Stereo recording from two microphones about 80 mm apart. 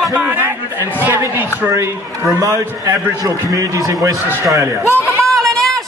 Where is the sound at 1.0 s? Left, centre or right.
Right.